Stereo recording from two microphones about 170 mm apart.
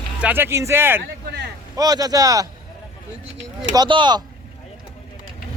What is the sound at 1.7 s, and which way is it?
Speech, 20° right (ahead or behind).